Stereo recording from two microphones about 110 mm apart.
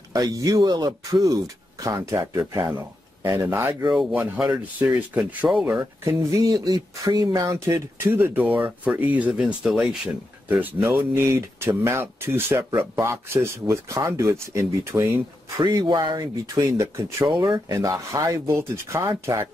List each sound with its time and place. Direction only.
0.1 s speech: 30° right (ahead or behind)
4.7 s speech: 15° right (ahead or behind)
5.5 s speech: 5° right (ahead or behind)
5.8 s speech: 30° right (ahead or behind); by 9.9 s 5° right (ahead or behind)
10.5 s speech: 15° right (ahead or behind)
15.6 s speech: 40° right (ahead or behind)